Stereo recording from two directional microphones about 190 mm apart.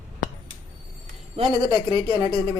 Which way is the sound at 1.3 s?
30° right (ahead or behind).